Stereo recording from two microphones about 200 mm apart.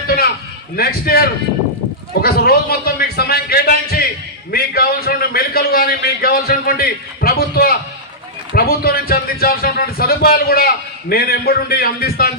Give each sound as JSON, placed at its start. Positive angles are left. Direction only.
{"t": 0.8, "sound": "speech", "side_deg": 50}